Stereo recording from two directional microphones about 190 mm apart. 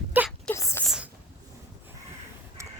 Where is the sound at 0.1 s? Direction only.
10° right (ahead or behind).